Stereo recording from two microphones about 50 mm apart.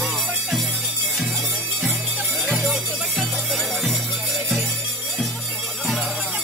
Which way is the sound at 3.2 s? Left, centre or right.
Centre.